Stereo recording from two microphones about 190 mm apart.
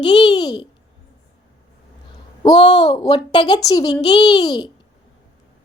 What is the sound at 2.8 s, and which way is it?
A child's voice, 20° left (ahead or behind).